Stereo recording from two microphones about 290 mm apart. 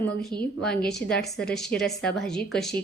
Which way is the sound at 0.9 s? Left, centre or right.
Centre.